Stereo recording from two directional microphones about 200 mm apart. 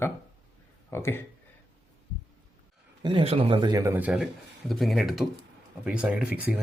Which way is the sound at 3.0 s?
25° right (ahead or behind).